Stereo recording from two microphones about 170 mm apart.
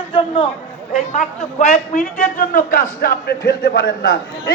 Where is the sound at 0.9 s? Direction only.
45° left (ahead or behind).